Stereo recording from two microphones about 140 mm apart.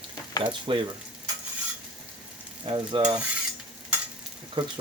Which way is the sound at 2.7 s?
35° right (ahead or behind).